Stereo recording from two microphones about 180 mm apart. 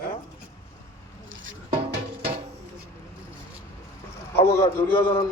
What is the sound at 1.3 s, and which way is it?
Music, 90° right.